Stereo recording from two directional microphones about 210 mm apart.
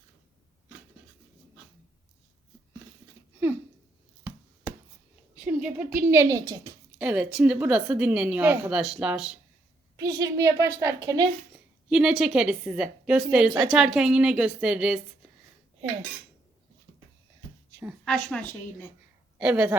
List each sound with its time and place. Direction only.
5.4 s a woman's voice: 5° right (ahead or behind)
10.2 s speech: 15° right (ahead or behind)
11.9 s a woman's voice: 5° right (ahead or behind)
18.0 s a woman's voice: 5° left (ahead or behind)
19.4 s a woman's voice: 5° right (ahead or behind)